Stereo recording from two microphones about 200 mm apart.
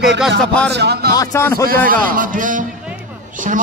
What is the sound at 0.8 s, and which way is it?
Speech, 55° right (ahead or behind).